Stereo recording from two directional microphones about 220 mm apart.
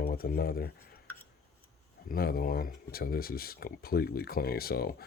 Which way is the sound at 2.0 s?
45° left (ahead or behind).